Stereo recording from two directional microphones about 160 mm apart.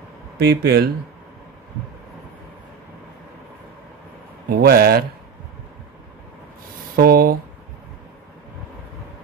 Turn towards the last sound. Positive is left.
turn(degrees=-65)  # may be behind; listen again after turning